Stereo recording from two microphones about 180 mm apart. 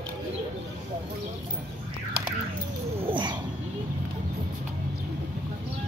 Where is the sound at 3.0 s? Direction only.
25° right (ahead or behind).